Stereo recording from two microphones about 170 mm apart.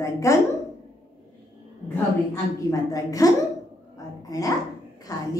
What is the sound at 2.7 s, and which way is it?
Speech, 20° left (ahead or behind).